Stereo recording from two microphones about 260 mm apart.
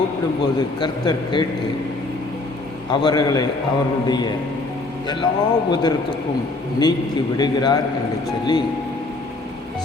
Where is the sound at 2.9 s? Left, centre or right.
Centre.